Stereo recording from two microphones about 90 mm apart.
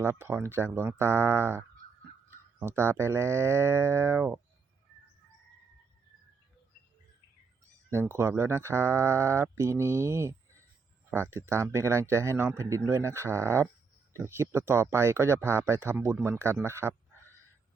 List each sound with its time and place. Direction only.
0.0 s speech: 25° right (ahead or behind)
2.7 s speech: 30° right (ahead or behind)
8.1 s speech: 25° right (ahead or behind)